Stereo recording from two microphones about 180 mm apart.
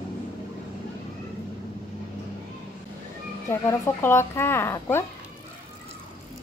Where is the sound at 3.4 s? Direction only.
15° left (ahead or behind).